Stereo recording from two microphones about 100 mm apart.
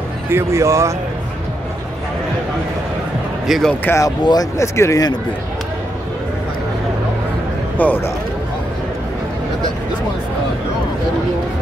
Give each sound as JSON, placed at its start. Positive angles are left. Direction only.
{"t": 0.3, "sound": "speech", "side_deg": -25}
{"t": 3.4, "sound": "speech", "side_deg": 0}
{"t": 3.8, "sound": "speech", "side_deg": 30}
{"t": 4.2, "sound": "speech", "side_deg": 45}
{"t": 4.6, "sound": "speech", "side_deg": 30}
{"t": 7.7, "sound": "a man's voice", "side_deg": 20}